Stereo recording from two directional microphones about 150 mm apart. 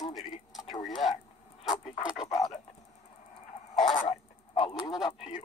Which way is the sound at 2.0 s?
5° right (ahead or behind).